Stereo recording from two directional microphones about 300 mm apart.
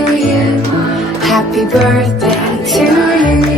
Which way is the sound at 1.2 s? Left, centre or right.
Centre.